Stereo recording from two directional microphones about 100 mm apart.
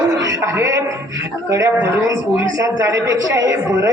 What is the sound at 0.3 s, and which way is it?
A woman's voice, 30° right (ahead or behind).